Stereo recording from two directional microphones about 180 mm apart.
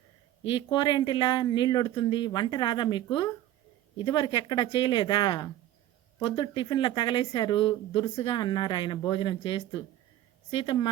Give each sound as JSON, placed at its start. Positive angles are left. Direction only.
{"t": 0.5, "sound": "speech", "side_deg": 25}